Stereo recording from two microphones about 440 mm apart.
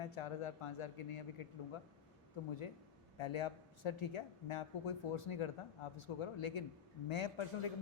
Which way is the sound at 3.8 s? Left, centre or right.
Left.